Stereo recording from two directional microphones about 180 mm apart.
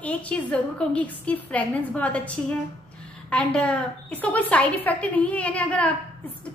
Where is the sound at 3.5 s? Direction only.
5° left (ahead or behind).